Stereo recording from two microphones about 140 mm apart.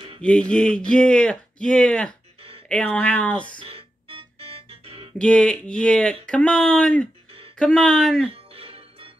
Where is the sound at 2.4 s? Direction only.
40° right (ahead or behind).